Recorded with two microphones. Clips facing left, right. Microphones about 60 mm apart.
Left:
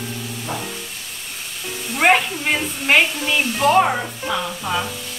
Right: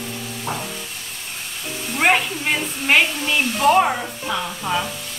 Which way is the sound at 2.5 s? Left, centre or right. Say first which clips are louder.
Left 1 dB; centre.